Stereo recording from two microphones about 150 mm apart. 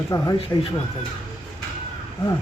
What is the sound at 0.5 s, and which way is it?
Speech, 15° left (ahead or behind).